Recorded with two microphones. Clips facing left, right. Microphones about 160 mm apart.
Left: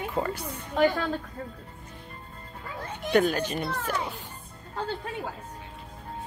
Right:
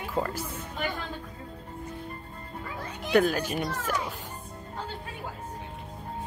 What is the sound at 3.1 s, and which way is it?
Speech, 5° right (ahead or behind).